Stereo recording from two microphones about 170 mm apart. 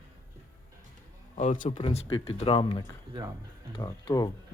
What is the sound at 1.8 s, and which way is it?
Speech, 35° left (ahead or behind).